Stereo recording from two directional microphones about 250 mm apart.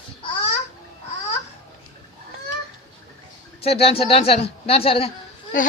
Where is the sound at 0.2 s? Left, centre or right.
Left.